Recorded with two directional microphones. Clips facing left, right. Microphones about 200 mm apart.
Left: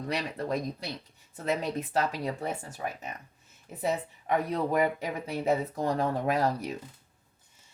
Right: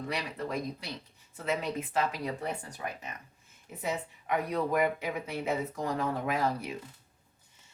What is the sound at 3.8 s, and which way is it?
Speech, 35° left (ahead or behind).